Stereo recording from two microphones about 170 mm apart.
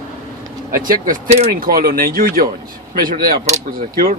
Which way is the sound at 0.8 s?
55° right (ahead or behind).